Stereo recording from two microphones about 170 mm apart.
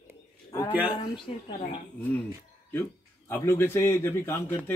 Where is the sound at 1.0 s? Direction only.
35° left (ahead or behind).